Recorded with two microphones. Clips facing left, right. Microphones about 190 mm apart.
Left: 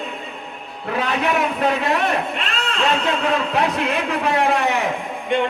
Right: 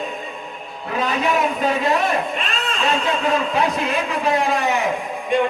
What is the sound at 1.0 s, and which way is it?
Music, 65° left (ahead or behind).